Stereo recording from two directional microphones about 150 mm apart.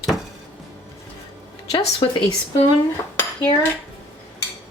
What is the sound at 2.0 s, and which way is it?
Speech, 35° left (ahead or behind).